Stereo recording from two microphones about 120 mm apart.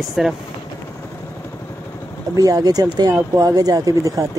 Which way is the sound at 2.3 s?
30° right (ahead or behind).